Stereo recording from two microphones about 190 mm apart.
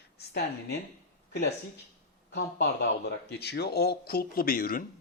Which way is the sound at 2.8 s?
60° left (ahead or behind).